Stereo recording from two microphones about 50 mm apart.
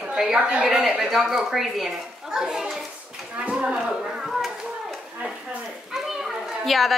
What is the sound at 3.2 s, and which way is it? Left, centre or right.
Livestock, right.